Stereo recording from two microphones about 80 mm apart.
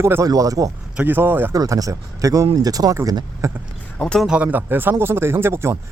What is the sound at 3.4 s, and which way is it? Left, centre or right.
Speech, right.